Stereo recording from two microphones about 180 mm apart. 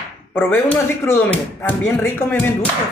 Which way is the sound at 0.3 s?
10° left (ahead or behind).